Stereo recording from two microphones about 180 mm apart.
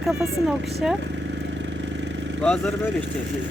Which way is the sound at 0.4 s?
Centre (ahead or behind).